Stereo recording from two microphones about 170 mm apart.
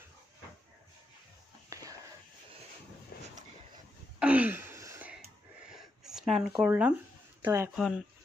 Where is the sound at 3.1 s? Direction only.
65° left (ahead or behind).